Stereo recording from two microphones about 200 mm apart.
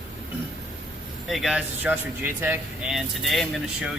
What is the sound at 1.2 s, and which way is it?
Speech, centre (ahead or behind).